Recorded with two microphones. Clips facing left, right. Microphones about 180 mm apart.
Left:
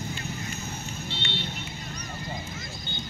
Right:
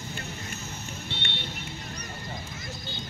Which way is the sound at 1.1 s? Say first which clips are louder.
Left 4 dB; 55° right (ahead or behind).